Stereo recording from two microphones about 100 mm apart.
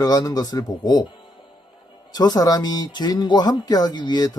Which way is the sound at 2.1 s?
40° left (ahead or behind).